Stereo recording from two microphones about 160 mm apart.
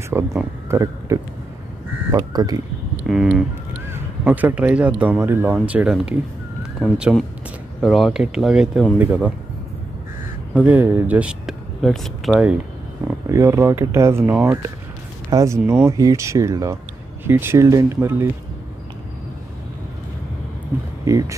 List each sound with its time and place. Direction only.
0.1 s speech: 15° right (ahead or behind)
3.1 s speech: 5° right (ahead or behind)
10.5 s speech: 10° right (ahead or behind)
13.3 s speech: 20° right (ahead or behind)
21.0 s speech: 20° right (ahead or behind)